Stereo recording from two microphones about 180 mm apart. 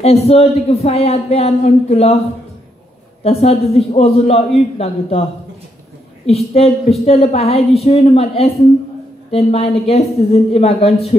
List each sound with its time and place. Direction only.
0.0 s a woman's voice: 35° left (ahead or behind)
3.3 s a woman's voice: 35° left (ahead or behind)
6.2 s a woman's voice: 35° left (ahead or behind)